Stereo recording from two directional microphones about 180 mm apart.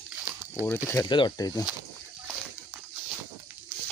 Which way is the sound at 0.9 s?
20° left (ahead or behind).